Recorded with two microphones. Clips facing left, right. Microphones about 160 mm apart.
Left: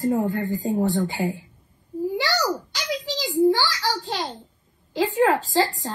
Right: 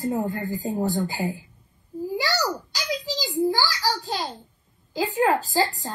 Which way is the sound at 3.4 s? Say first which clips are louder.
Left 4 dB; 5° right (ahead or behind).